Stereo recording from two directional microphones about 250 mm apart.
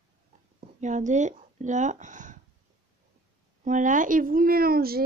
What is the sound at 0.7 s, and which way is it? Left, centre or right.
Speech, right.